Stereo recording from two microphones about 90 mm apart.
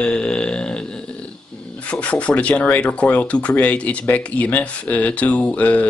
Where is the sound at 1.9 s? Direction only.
15° left (ahead or behind).